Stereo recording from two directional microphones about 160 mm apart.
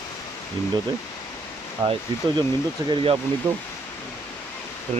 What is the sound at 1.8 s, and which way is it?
Speech, 30° right (ahead or behind).